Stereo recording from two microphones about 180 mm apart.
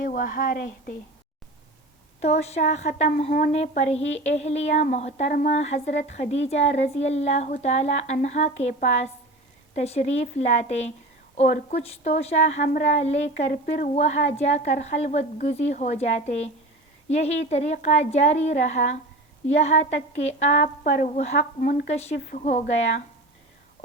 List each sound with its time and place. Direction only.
0.0 s a woman's voice: 50° left (ahead or behind)
2.2 s a woman's voice: 35° left (ahead or behind)
21.9 s a woman's voice: 35° left (ahead or behind)
22.3 s a woman's voice: 50° left (ahead or behind)